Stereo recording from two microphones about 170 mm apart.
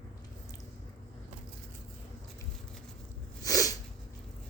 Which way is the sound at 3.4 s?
20° left (ahead or behind).